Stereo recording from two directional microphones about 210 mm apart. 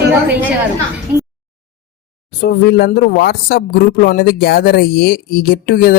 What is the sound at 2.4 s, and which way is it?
Speech, 50° left (ahead or behind).